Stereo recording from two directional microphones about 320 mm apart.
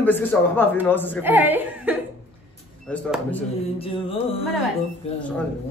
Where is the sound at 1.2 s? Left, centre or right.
Centre.